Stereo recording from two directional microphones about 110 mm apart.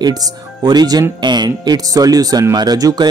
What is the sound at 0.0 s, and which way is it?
Speech, 35° right (ahead or behind).